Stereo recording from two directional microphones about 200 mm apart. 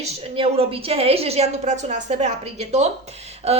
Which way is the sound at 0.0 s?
30° right (ahead or behind).